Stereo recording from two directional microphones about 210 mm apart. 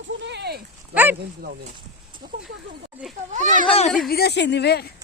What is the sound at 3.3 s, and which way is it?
Speech, 35° right (ahead or behind).